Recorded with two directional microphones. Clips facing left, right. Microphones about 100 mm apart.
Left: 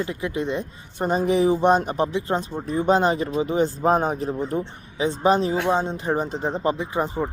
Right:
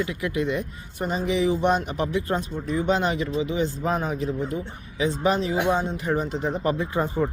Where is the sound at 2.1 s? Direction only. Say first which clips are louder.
Left 1 dB; 25° left (ahead or behind).